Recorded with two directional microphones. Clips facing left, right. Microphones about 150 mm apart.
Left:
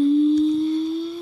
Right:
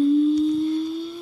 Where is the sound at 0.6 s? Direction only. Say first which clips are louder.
Left 2 dB; centre (ahead or behind).